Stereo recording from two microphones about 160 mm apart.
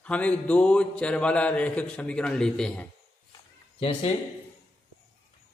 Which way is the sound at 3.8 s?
35° left (ahead or behind).